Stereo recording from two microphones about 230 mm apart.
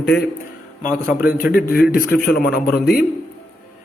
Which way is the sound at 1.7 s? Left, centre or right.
Left.